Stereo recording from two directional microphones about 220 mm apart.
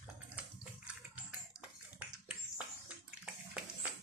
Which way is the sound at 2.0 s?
5° right (ahead or behind).